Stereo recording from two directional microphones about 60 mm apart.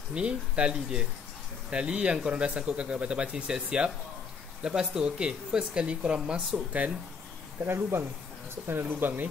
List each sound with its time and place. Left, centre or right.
0.1 s speech: centre
7.6 s speech: right